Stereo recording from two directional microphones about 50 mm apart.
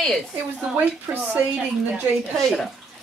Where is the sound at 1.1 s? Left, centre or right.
Right.